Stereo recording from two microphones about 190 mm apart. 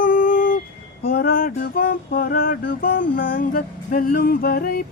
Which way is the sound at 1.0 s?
55° left (ahead or behind).